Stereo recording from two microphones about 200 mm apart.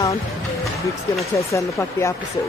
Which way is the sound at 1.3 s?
15° left (ahead or behind).